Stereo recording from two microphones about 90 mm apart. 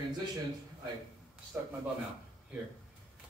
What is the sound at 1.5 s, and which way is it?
Speech, 20° right (ahead or behind).